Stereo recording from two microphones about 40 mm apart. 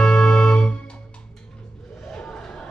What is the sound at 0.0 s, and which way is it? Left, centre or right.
Music, centre.